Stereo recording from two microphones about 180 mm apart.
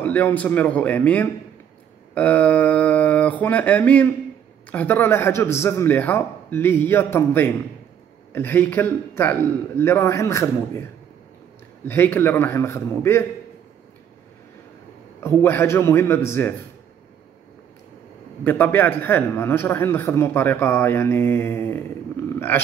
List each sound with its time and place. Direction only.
0.0 s a man's voice: 10° left (ahead or behind)
15.1 s a man's voice: 15° left (ahead or behind)
18.4 s a man's voice: 10° left (ahead or behind)